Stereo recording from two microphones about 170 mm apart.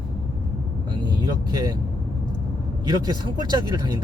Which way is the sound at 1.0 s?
25° right (ahead or behind).